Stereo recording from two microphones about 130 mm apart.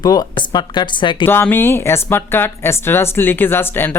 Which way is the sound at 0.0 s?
30° left (ahead or behind).